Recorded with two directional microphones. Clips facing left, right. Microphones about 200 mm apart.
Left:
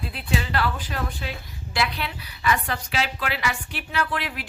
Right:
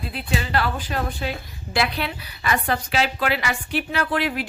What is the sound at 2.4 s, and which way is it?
A woman's voice, 50° right (ahead or behind).